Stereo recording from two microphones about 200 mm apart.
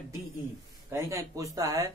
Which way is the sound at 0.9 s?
15° right (ahead or behind).